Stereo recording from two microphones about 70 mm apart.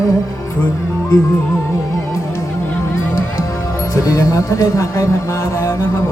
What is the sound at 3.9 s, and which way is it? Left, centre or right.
Speech, left.